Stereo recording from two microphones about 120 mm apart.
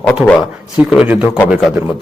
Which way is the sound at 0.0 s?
10° left (ahead or behind).